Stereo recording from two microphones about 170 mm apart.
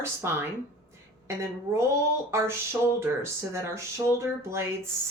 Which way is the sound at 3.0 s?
15° right (ahead or behind).